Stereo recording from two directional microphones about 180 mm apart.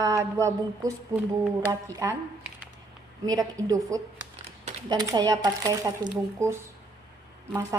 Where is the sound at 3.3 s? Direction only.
20° right (ahead or behind).